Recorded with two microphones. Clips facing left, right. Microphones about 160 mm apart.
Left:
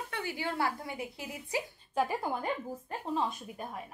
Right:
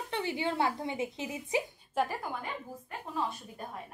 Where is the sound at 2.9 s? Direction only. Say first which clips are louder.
Left 2 dB; 35° left (ahead or behind).